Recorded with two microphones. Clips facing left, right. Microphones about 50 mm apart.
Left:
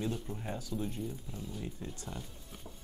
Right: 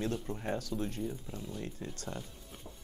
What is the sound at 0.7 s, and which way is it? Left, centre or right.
Speech, right.